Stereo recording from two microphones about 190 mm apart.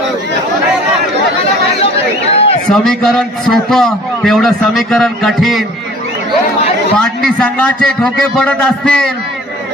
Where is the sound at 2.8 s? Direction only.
Centre (ahead or behind).